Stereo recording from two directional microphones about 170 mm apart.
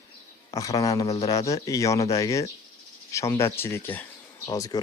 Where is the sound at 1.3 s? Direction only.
20° left (ahead or behind).